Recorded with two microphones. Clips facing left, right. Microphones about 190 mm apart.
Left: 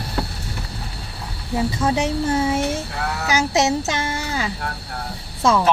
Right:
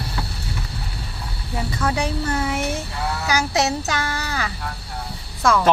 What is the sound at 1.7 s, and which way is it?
A child's voice, 25° left (ahead or behind).